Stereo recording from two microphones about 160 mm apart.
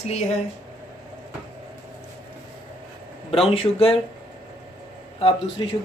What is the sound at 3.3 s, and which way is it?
Speech, 35° left (ahead or behind).